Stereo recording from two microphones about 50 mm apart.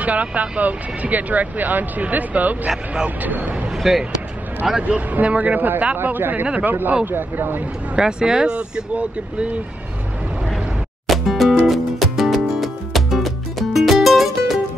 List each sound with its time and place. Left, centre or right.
0.0 s speech: right
3.7 s basketball bounce: centre
4.8 s speech: right
8.0 s speech: centre
11.1 s music: centre